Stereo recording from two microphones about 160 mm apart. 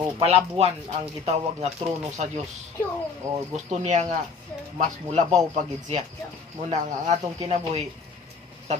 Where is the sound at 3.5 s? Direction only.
45° right (ahead or behind).